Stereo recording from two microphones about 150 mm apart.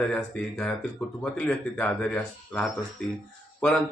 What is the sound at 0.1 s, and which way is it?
Speech, 5° left (ahead or behind).